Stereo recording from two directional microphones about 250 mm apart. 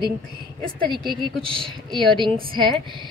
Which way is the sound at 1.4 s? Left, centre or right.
Centre.